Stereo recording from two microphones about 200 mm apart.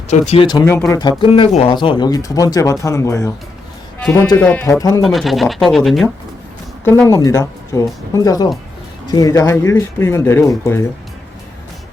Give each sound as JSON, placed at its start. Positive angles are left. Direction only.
{"t": 0.1, "sound": "speech", "side_deg": 35}
{"t": 0.4, "sound": "speech", "side_deg": 15}
{"t": 5.0, "sound": "speech", "side_deg": 0}
{"t": 7.1, "sound": "speech", "side_deg": 15}